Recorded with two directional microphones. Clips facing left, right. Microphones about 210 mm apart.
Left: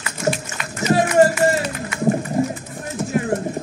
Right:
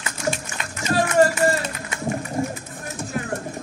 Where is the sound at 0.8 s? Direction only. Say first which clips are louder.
Left 3 dB; 20° left (ahead or behind).